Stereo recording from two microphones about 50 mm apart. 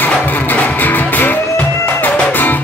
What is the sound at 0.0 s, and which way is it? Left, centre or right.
Music, left.